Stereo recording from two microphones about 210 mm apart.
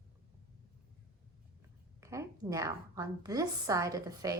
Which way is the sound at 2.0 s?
15° right (ahead or behind).